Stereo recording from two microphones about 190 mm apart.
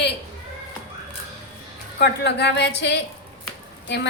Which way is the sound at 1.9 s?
60° left (ahead or behind).